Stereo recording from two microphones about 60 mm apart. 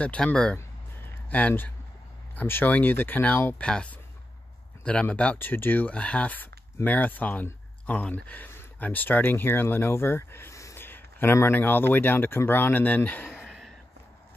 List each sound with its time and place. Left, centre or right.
0.0 s speech: centre
1.3 s speech: left
2.4 s a man's voice: left
3.6 s speech: centre
5.1 s speech: left
5.5 s a man's voice: left
5.9 s speech: left
8.5 s a sound: left
8.8 s a man's voice: left
10.5 s a sound: left
10.8 s a sound: left
11.5 s a man's voice: left
13.5 s a sound: centre